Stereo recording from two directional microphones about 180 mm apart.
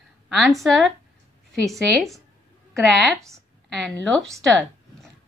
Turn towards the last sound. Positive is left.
turn(degrees=5)  # may be behind; listen again after turning